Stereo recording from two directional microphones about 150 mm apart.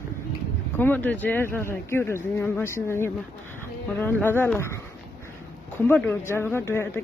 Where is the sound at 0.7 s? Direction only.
15° left (ahead or behind).